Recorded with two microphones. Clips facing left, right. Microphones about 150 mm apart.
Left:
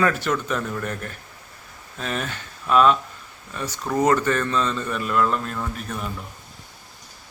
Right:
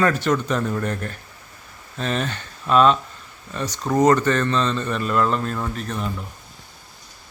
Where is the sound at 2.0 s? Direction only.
5° left (ahead or behind).